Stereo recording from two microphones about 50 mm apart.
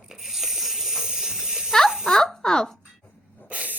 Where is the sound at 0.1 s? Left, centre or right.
Centre.